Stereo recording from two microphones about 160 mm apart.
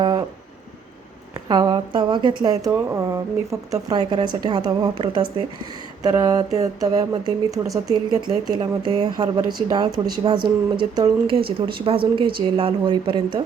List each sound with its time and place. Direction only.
0.0 s vehicle: 25° right (ahead or behind)
1.5 s speech: 25° right (ahead or behind)